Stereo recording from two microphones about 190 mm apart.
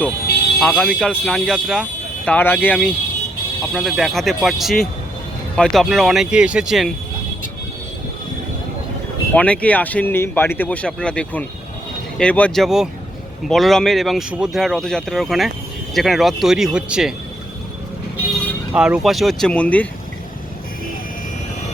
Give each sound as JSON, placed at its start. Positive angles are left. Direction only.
{"t": 0.6, "sound": "speech", "side_deg": 10}
{"t": 9.3, "sound": "speech", "side_deg": 5}
{"t": 18.7, "sound": "speech", "side_deg": -5}